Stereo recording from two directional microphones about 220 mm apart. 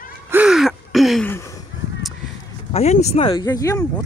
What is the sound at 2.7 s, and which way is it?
Speech, 30° left (ahead or behind).